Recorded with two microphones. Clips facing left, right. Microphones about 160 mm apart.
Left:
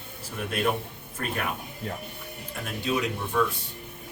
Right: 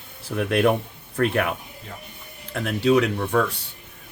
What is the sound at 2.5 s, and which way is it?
Speech, 65° right (ahead or behind).